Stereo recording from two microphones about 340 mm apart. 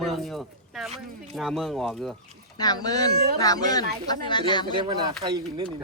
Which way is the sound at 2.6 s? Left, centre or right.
Centre.